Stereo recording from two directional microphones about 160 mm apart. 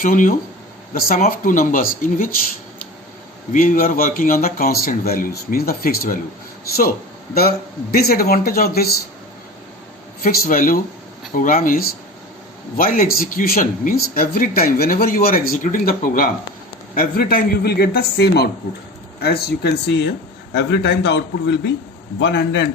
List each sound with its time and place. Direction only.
0.0 s speech: 60° left (ahead or behind)
3.5 s speech: 55° left (ahead or behind)
7.3 s speech: 70° left (ahead or behind)
10.2 s a man's voice: 60° left (ahead or behind); by 21.7 s 90° left